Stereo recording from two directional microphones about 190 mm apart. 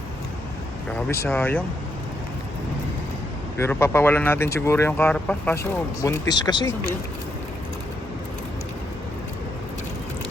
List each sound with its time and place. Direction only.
0.9 s speech: 10° left (ahead or behind)
3.6 s speech: 15° left (ahead or behind)
6.0 s speech: 20° left (ahead or behind)